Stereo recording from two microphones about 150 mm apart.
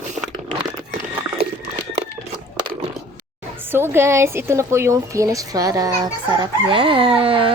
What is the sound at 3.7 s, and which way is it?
A woman's voice, 15° right (ahead or behind).